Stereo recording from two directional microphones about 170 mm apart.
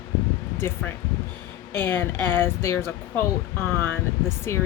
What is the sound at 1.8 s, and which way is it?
Speech, 10° left (ahead or behind).